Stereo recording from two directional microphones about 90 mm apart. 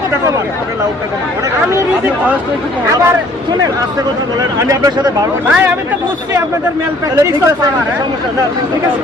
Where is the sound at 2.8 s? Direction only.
30° right (ahead or behind).